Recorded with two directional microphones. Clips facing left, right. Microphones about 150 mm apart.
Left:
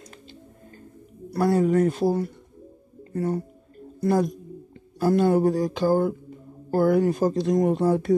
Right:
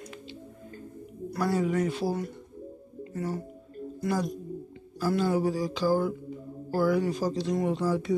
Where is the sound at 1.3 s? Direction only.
45° left (ahead or behind).